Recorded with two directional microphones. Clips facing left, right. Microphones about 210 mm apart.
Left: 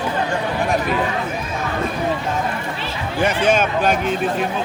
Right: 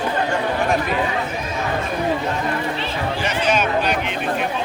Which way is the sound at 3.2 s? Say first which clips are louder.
Left 5 dB; 50° left (ahead or behind).